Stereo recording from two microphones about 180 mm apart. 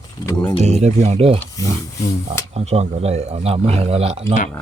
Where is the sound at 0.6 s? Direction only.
35° right (ahead or behind).